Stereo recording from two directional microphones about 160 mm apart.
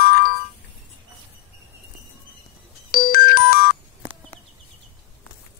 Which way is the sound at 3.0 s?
65° left (ahead or behind).